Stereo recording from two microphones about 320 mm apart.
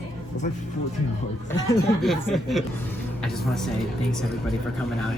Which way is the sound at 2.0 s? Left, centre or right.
Centre.